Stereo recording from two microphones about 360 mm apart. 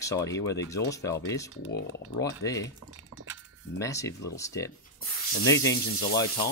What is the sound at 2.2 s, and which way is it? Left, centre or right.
Speech, centre.